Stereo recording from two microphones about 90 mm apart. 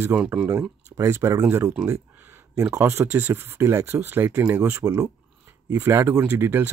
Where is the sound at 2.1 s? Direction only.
25° right (ahead or behind).